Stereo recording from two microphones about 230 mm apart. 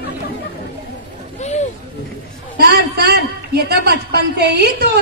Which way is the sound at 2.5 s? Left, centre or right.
Right.